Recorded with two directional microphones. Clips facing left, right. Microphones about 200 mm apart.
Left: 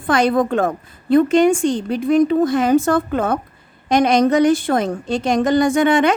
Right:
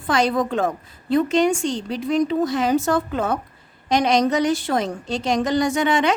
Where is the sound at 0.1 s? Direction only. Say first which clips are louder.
Left 4 dB; 55° left (ahead or behind).